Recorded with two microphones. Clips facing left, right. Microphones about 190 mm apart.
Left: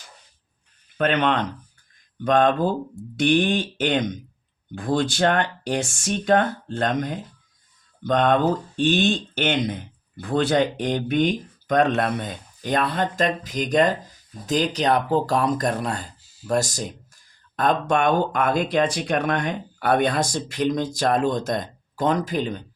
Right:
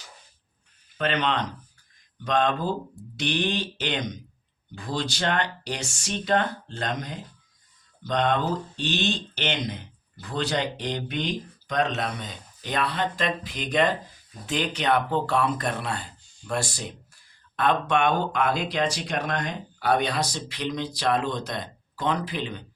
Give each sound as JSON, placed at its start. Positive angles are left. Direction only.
{"t": 0.9, "sound": "speech", "side_deg": 55}
{"t": 16.2, "sound": "a sound", "side_deg": 5}
{"t": 16.5, "sound": "speech", "side_deg": 45}